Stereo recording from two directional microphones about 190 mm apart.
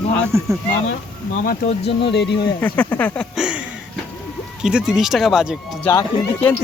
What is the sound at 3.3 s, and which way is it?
Speech, 5° right (ahead or behind).